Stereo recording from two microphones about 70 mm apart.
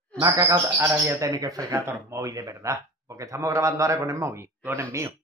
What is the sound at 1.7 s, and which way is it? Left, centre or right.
A man's voice, right.